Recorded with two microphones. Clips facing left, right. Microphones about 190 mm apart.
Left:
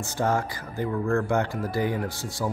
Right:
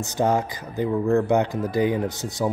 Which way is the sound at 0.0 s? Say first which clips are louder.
Right 4 dB; 20° right (ahead or behind).